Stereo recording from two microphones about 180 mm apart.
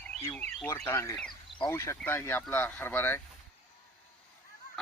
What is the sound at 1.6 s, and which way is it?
Speech, 15° left (ahead or behind).